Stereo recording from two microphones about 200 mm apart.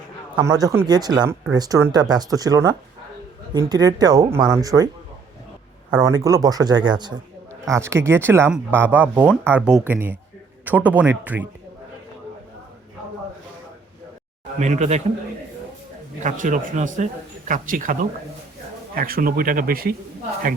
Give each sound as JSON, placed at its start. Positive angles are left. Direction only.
{"t": 0.3, "sound": "speech", "side_deg": -20}
{"t": 6.0, "sound": "speech", "side_deg": -20}
{"t": 14.6, "sound": "a man's voice", "side_deg": -35}
{"t": 16.2, "sound": "a man's voice", "side_deg": -40}
{"t": 18.9, "sound": "speech", "side_deg": -45}